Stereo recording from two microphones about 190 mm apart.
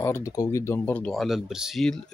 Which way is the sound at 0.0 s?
15° left (ahead or behind).